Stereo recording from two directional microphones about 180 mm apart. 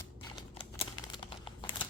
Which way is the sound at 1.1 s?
25° left (ahead or behind).